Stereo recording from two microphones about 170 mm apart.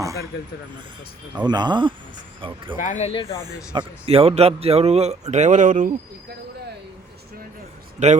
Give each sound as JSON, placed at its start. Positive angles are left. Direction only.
{"t": 1.5, "sound": "speech", "side_deg": -25}
{"t": 2.7, "sound": "speech", "side_deg": 50}
{"t": 3.1, "sound": "speech", "side_deg": 30}
{"t": 3.8, "sound": "a man's voice", "side_deg": -35}
{"t": 7.9, "sound": "a man's voice", "side_deg": -40}